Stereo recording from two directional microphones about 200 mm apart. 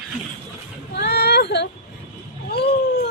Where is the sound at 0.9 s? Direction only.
55° left (ahead or behind).